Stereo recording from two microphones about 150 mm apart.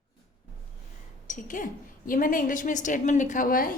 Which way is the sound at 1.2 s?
60° left (ahead or behind).